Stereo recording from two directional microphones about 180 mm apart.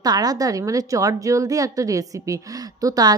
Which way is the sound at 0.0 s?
20° right (ahead or behind).